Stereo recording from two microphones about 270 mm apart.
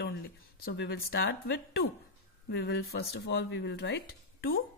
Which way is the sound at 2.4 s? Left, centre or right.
Left.